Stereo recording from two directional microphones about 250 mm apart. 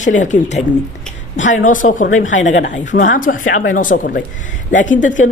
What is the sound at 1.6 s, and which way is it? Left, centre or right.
A woman's voice, left.